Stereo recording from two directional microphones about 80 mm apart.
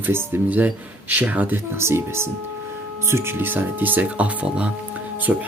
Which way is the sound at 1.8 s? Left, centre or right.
Right.